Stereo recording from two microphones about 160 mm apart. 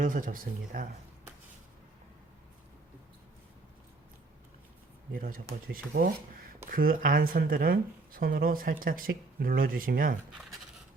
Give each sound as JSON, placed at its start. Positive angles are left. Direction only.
{"t": 0.0, "sound": "speech", "side_deg": -55}
{"t": 5.1, "sound": "speech", "side_deg": -60}